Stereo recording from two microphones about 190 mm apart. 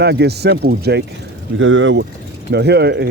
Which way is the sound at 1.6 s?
90° right.